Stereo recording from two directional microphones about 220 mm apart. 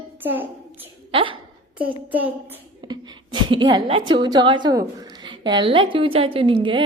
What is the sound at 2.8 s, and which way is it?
A woman's voice, 20° right (ahead or behind).